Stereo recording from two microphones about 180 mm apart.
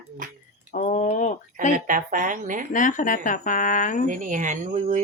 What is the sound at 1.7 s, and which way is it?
Speech, 45° right (ahead or behind).